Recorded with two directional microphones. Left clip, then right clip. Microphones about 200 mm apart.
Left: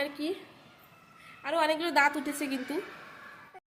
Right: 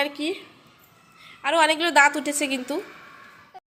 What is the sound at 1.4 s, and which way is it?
Speech, 25° right (ahead or behind).